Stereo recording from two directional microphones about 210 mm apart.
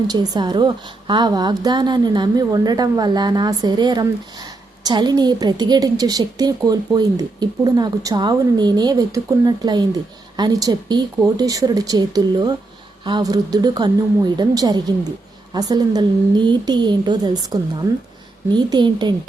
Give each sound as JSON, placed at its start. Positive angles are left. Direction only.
{"t": 0.1, "sound": "a woman's voice", "side_deg": -20}